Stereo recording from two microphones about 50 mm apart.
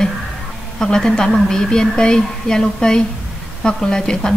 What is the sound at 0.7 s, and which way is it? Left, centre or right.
A woman's voice, centre.